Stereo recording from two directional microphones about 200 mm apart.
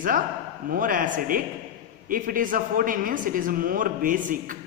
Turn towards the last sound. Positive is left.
turn(degrees=-40)  # may be behind; listen again after turning